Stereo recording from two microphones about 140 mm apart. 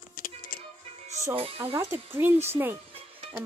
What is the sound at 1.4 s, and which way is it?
Speech, 40° right (ahead or behind).